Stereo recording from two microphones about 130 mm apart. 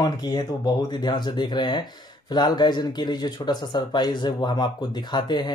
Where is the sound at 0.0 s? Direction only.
30° left (ahead or behind).